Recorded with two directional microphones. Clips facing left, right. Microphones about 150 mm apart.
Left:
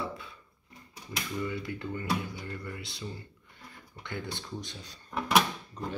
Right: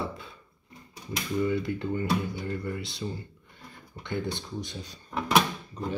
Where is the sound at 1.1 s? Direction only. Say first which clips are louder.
Right 7 dB; 30° right (ahead or behind).